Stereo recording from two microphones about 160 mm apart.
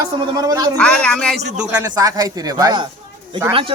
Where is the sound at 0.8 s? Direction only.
5° left (ahead or behind).